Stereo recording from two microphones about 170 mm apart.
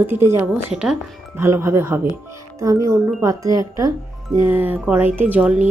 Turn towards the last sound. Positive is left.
turn(degrees=-10)  # may be behind; listen again after turning